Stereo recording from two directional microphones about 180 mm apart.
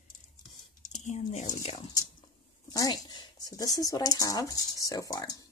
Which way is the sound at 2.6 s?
20° left (ahead or behind).